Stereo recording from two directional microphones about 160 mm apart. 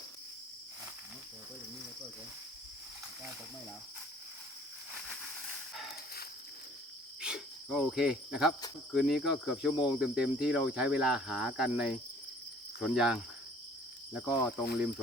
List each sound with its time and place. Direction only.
7.2 s cricket: 5° right (ahead or behind)
14.6 s speech: 80° left